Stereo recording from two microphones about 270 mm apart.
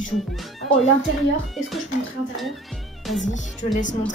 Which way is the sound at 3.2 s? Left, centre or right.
Left.